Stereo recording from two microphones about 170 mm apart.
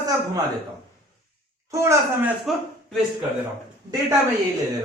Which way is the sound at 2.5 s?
Centre (ahead or behind).